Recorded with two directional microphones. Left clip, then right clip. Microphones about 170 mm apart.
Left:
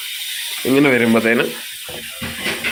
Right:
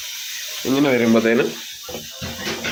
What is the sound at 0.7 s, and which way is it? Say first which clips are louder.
Speech: left 4 dB; 20° left (ahead or behind).